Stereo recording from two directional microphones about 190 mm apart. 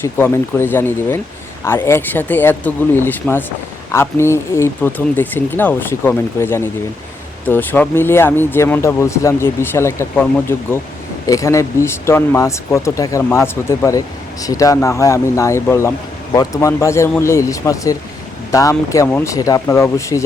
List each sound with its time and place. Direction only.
0.0 s speech: 10° left (ahead or behind)